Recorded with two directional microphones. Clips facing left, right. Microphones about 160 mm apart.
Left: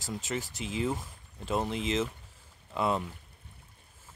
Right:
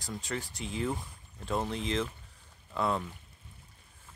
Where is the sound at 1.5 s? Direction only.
15° left (ahead or behind).